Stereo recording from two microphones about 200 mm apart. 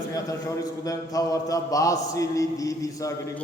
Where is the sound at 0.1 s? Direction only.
15° left (ahead or behind).